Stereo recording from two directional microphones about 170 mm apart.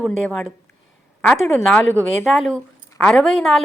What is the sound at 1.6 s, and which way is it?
A woman's voice, 5° left (ahead or behind).